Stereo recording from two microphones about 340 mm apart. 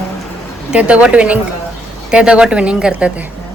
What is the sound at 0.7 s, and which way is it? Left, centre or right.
Speech, centre.